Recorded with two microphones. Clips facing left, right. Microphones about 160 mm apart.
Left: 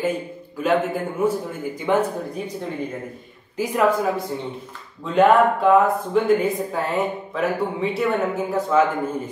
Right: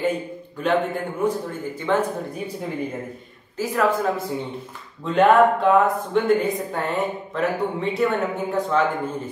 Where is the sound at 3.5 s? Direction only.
15° left (ahead or behind).